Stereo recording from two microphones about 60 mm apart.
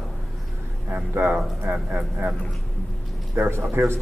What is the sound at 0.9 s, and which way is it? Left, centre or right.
Speech, right.